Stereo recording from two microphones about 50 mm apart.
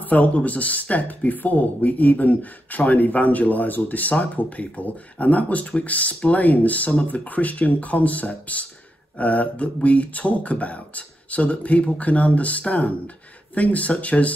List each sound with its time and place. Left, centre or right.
0.0 s speech: left